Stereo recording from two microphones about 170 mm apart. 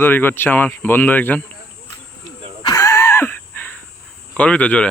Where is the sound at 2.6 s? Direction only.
20° left (ahead or behind).